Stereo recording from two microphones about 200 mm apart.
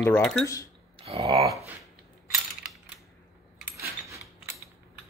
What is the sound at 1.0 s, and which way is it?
Speech, 30° right (ahead or behind).